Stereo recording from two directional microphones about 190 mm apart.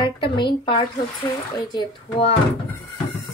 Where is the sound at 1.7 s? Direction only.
25° left (ahead or behind).